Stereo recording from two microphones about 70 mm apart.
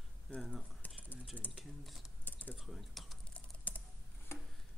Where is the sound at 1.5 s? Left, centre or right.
Centre.